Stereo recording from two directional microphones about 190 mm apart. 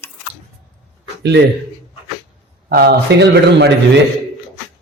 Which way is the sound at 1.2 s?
65° right (ahead or behind).